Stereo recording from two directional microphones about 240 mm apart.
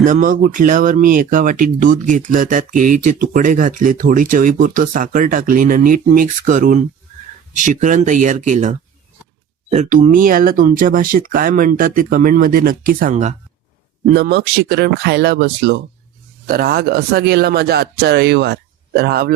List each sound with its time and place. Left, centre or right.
0.0 s speech: right